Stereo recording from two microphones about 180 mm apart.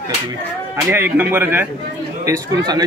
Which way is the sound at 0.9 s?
10° right (ahead or behind).